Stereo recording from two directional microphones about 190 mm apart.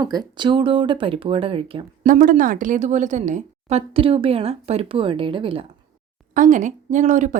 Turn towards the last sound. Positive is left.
turn(degrees=-40)  # may be behind; listen again after turning